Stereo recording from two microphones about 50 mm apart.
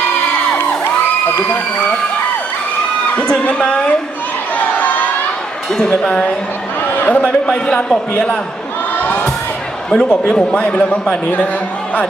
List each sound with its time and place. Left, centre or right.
3.2 s a sound: centre
3.4 s a man's voice: left
4.5 s crowd: left
6.0 s a man's voice: centre
6.9 s a sound: left
7.2 s a man's voice: left
9.9 s a man's voice: centre